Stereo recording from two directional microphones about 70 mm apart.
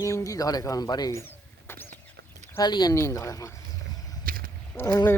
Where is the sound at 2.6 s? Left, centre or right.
Left.